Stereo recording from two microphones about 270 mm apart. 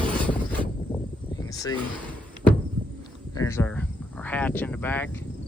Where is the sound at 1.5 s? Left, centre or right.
Centre.